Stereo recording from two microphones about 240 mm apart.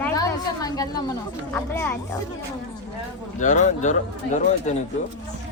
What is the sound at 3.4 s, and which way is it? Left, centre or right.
A man's voice, left.